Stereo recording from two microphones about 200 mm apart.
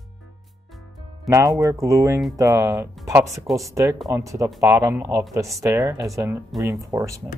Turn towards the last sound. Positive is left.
turn(degrees=-10)  # may be behind; listen again after turning